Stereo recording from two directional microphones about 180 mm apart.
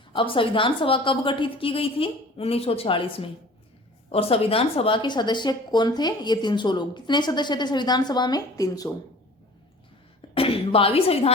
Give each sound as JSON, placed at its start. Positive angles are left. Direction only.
{"t": 0.1, "sound": "speech", "side_deg": 30}
{"t": 10.2, "sound": "cough", "side_deg": 30}